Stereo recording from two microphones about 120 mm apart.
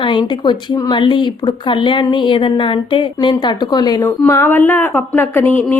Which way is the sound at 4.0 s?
20° left (ahead or behind).